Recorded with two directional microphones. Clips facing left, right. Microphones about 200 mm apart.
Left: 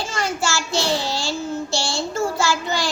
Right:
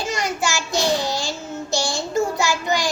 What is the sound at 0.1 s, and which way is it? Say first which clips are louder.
Child singing: even; 20° right (ahead or behind).